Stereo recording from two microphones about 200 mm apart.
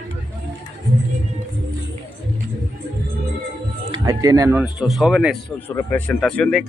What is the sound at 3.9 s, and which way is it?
Speech, 15° right (ahead or behind).